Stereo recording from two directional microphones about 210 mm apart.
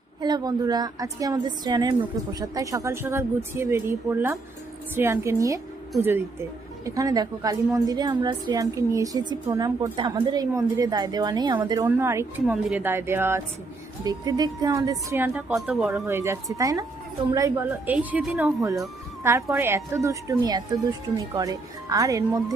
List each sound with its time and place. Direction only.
0.2 s a woman's voice: 20° right (ahead or behind)